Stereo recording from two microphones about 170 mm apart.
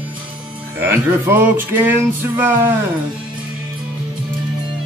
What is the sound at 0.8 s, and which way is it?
Music, 15° right (ahead or behind).